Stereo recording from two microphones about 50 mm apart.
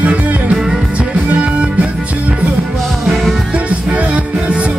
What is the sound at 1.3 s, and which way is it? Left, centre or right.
Music, right.